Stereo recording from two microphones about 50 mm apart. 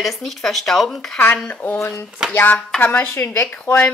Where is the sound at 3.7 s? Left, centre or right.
Left.